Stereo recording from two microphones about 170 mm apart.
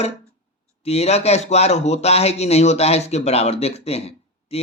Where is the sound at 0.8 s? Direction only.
40° left (ahead or behind).